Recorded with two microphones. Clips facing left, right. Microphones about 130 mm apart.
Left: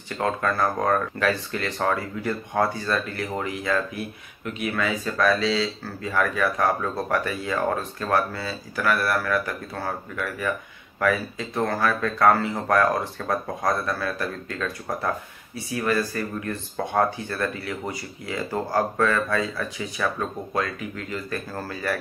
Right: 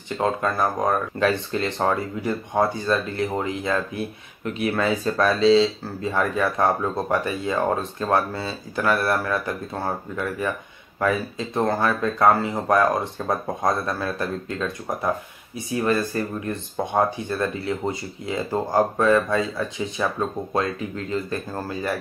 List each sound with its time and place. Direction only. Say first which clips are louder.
0.2 s speech: right 1 dB; 20° right (ahead or behind)